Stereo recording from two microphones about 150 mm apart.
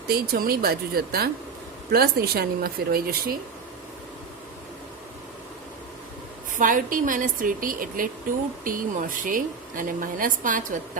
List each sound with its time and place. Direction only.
0.1 s speech: 85° right
6.6 s speech: 60° right (ahead or behind)